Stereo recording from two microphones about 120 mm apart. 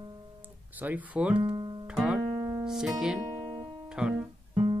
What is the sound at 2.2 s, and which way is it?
Music, 35° right (ahead or behind).